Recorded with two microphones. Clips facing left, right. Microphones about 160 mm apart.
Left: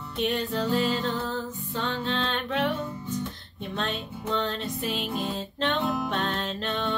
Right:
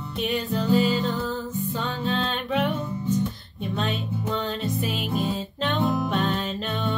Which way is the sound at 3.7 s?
5° right (ahead or behind).